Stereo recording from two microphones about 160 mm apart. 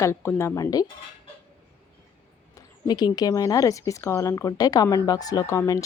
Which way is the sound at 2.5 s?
25° left (ahead or behind).